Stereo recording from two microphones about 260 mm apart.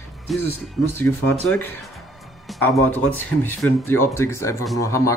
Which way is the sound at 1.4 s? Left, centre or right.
Centre.